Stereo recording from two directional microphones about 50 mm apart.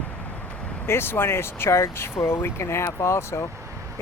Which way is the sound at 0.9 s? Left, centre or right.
Left.